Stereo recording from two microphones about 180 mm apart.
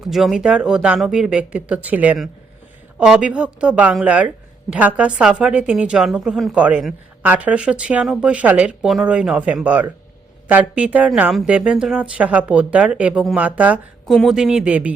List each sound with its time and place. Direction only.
0.0 s a woman's voice: centre (ahead or behind)